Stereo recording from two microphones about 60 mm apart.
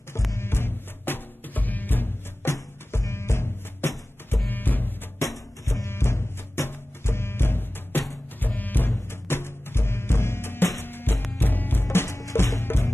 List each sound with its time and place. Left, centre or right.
0.4 s music: left
2.9 s music: left
4.5 s music: left
5.9 s music: left
12.2 s music: left